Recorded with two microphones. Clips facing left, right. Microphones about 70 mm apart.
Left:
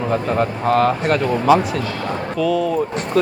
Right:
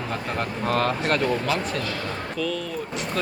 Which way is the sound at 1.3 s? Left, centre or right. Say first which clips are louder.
Left 10 dB; centre.